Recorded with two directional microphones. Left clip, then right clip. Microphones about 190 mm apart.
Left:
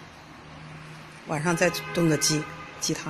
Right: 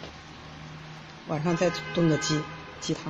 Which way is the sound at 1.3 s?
5° right (ahead or behind).